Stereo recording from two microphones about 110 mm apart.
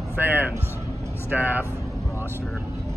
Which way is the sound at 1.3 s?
15° right (ahead or behind).